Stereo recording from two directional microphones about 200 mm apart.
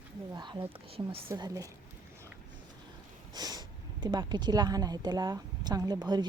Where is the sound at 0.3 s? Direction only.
20° right (ahead or behind).